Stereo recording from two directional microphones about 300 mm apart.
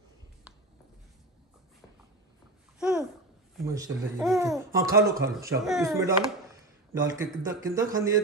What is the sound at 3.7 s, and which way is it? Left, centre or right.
Speech, centre.